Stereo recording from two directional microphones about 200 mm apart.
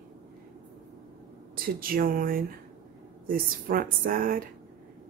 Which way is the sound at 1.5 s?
45° right (ahead or behind).